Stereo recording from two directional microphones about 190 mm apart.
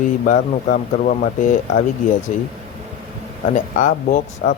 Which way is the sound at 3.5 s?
45° left (ahead or behind).